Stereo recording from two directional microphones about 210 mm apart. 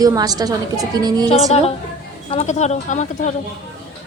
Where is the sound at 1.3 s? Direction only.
30° left (ahead or behind).